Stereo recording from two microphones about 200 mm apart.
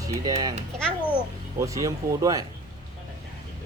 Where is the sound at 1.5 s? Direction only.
15° right (ahead or behind).